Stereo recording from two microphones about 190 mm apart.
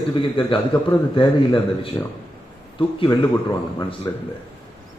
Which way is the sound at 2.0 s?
15° left (ahead or behind).